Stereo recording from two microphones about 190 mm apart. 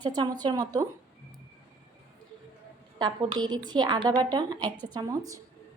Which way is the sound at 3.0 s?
25° right (ahead or behind).